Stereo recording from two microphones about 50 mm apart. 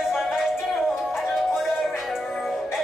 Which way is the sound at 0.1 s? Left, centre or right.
Centre.